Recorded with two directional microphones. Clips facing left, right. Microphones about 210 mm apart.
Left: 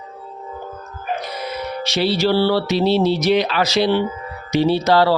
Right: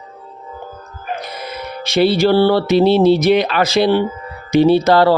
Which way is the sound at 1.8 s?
55° right (ahead or behind).